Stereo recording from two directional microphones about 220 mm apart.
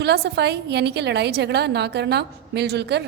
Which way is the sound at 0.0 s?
50° right (ahead or behind).